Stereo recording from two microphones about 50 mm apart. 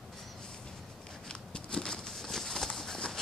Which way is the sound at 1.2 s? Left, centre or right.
Centre.